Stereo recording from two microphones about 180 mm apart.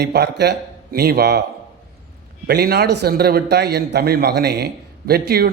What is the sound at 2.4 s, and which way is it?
A man's voice, 60° right (ahead or behind).